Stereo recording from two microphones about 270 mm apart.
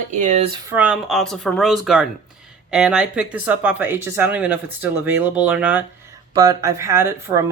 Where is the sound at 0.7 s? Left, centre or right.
Centre.